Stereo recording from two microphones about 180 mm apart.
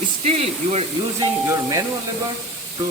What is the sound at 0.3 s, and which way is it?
Speech, 35° right (ahead or behind).